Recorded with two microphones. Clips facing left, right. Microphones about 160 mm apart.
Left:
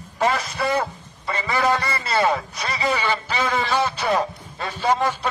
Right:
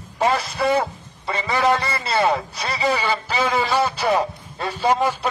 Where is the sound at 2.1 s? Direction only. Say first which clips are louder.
Right 1 dB; 10° right (ahead or behind).